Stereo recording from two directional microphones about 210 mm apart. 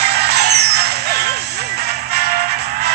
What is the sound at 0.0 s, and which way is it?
Music, 50° right (ahead or behind).